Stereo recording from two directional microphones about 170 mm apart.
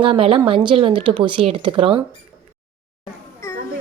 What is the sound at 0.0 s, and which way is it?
Speech, 30° right (ahead or behind).